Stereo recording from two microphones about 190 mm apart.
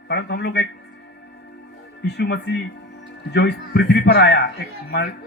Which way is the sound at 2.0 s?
60° left (ahead or behind).